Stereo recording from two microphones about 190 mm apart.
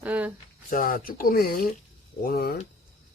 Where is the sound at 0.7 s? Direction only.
45° left (ahead or behind).